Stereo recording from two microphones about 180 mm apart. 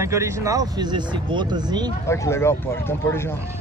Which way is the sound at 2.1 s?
15° left (ahead or behind).